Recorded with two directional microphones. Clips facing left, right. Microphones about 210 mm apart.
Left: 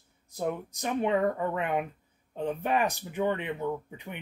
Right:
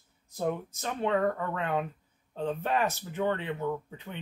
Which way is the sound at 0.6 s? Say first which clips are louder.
Left 3 dB; 15° left (ahead or behind).